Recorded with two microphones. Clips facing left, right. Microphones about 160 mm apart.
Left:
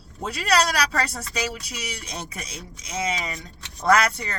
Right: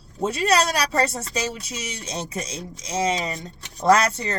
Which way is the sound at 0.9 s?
25° right (ahead or behind).